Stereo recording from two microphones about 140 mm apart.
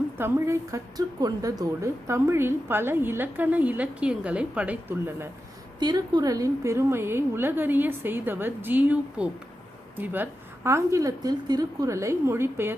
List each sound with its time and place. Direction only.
0.2 s a woman's voice: 20° right (ahead or behind)
5.8 s a woman's voice: 30° right (ahead or behind)